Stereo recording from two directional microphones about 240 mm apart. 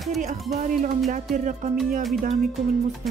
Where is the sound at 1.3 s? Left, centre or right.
Right.